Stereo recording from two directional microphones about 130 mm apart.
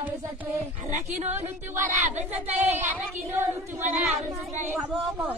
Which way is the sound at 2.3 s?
15° right (ahead or behind).